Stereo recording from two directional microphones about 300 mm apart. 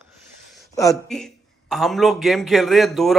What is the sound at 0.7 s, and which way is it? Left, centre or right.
Speech, centre.